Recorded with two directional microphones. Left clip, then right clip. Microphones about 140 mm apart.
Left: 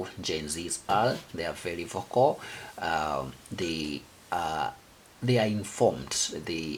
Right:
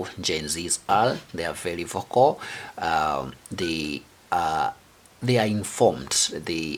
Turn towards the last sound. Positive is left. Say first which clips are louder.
# right 5 dB
turn(degrees=-35)  # may be behind; listen again after turning